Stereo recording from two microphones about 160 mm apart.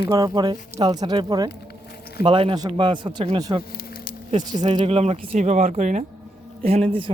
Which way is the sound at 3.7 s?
65° left (ahead or behind).